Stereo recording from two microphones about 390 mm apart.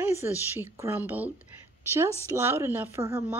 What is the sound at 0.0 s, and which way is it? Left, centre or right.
Speech, centre.